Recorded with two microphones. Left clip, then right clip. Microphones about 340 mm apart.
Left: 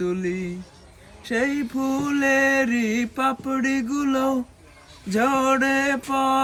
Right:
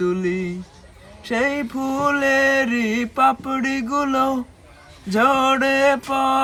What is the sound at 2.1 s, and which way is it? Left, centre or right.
Mantra, centre.